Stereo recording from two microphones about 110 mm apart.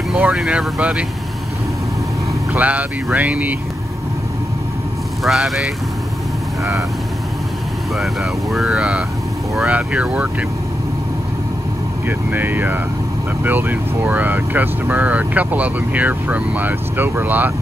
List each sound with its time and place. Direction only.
0.2 s speech: 5° right (ahead or behind)
2.5 s speech: 15° right (ahead or behind)
5.2 s speech: centre (ahead or behind)
8.0 s speech: centre (ahead or behind)
12.1 s speech: 15° right (ahead or behind)